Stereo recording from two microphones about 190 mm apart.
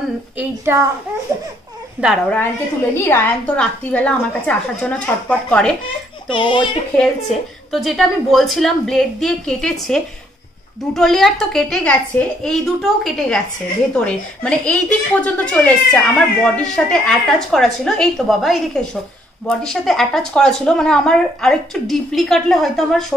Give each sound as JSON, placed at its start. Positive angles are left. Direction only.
{"t": 0.4, "sound": "a woman's voice", "side_deg": -15}
{"t": 2.0, "sound": "a woman's voice", "side_deg": -5}
{"t": 2.9, "sound": "a woman's voice", "side_deg": 10}
{"t": 6.2, "sound": "speech", "side_deg": 25}
{"t": 7.0, "sound": "speech", "side_deg": 0}